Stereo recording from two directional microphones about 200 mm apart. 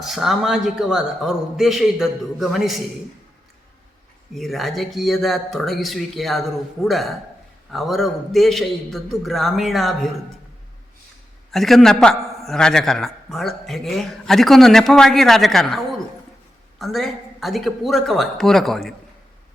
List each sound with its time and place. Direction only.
0.0 s a man's voice: centre (ahead or behind)
4.4 s a man's voice: centre (ahead or behind)
11.5 s a man's voice: centre (ahead or behind)